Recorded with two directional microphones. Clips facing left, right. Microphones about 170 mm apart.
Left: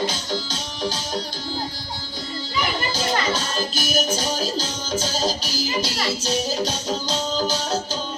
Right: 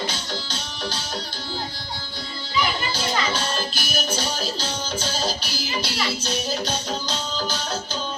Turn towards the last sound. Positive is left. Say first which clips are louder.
# left 5 dB
turn(degrees=40)  # may be behind; listen again after turning